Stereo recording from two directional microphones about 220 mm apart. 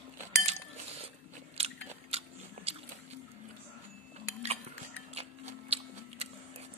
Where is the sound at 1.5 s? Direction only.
30° right (ahead or behind).